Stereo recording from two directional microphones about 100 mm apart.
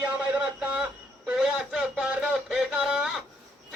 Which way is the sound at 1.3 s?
5° right (ahead or behind).